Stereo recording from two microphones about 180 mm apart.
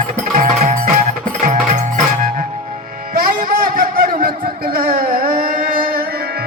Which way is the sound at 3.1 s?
50° right (ahead or behind).